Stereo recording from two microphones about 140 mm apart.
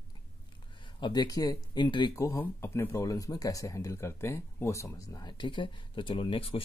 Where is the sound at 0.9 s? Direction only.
35° left (ahead or behind).